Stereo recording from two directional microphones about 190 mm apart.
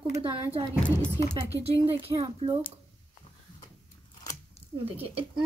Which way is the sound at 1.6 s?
30° right (ahead or behind).